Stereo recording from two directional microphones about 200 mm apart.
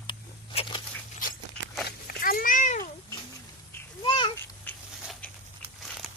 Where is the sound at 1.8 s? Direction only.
50° left (ahead or behind).